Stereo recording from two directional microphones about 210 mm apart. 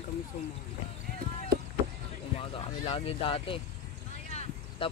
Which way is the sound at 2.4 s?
25° left (ahead or behind).